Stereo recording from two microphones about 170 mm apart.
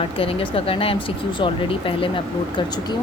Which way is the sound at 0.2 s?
35° left (ahead or behind).